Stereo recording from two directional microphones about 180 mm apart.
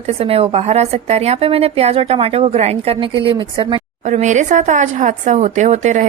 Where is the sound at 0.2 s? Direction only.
35° right (ahead or behind).